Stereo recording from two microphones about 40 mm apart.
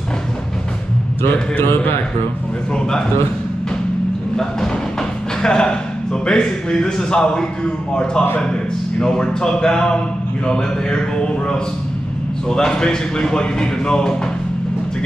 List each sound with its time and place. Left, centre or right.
1.2 s a man's voice: left
5.4 s speech: centre